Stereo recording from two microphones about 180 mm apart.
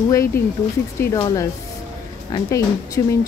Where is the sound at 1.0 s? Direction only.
15° left (ahead or behind).